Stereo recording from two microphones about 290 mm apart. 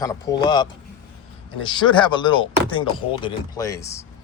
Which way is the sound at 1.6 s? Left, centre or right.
Centre.